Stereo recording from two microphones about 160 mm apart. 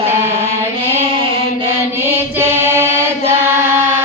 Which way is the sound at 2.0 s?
15° right (ahead or behind).